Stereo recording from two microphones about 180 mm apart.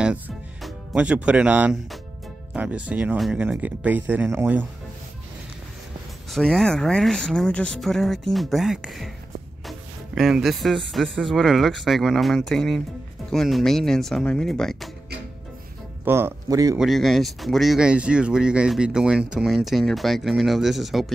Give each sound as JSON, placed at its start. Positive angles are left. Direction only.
{"t": 0.0, "sound": "speech", "side_deg": 0}
{"t": 6.3, "sound": "speech", "side_deg": 0}
{"t": 9.7, "sound": "music", "side_deg": 0}
{"t": 10.9, "sound": "speech", "side_deg": 0}
{"t": 16.1, "sound": "speech", "side_deg": -15}
{"t": 16.7, "sound": "speech", "side_deg": 0}